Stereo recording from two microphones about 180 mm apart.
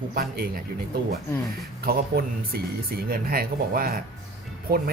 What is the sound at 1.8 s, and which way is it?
Speech, 55° right (ahead or behind).